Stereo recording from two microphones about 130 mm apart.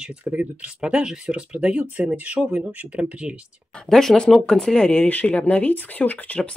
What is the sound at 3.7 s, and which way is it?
Speech, 5° left (ahead or behind).